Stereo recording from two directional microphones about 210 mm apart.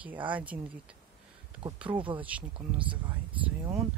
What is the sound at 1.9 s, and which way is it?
Speech, 25° right (ahead or behind).